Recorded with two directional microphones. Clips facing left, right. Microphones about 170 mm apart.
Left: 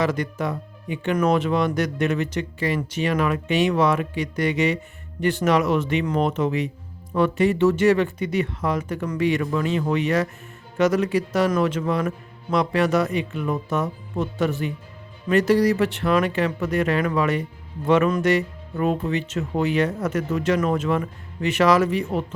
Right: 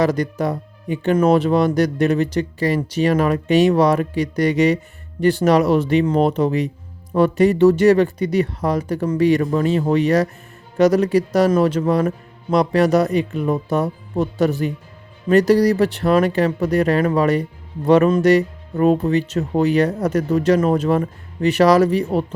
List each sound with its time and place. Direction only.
0.0 s speech: 35° right (ahead or behind)